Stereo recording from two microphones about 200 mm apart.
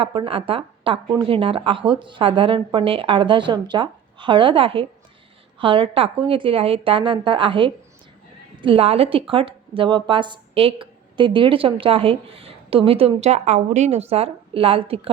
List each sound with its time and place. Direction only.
0.0 s a woman's voice: 25° right (ahead or behind)